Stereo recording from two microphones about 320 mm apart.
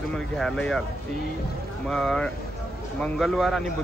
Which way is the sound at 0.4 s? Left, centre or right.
Centre.